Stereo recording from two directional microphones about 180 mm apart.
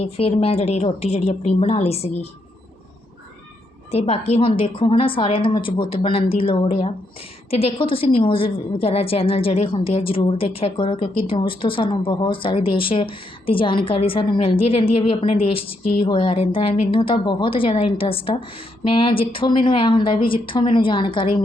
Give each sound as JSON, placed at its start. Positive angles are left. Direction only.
{"t": 0.0, "sound": "a woman's voice", "side_deg": 35}
{"t": 3.9, "sound": "a woman's voice", "side_deg": 35}